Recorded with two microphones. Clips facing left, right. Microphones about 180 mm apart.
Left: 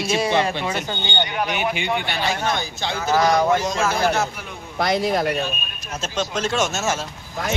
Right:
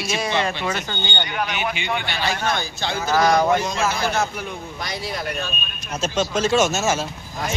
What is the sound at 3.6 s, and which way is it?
Speech, 40° left (ahead or behind).